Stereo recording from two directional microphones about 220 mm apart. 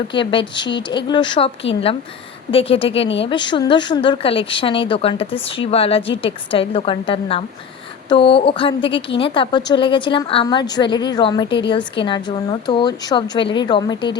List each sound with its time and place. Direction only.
0.1 s speech: 20° left (ahead or behind)
2.5 s speech: 25° left (ahead or behind)